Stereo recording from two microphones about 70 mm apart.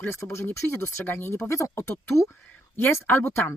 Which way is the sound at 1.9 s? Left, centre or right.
Left.